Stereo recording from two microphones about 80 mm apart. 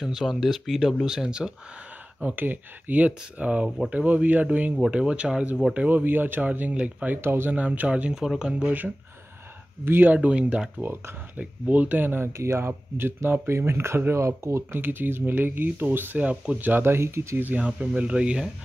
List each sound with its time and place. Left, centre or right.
0.0 s speech: centre
2.2 s speech: right
4.7 s speech: centre
5.9 s speech: right
7.2 s speech: right
10.1 s speech: centre; by 17.4 s right
17.4 s speech: centre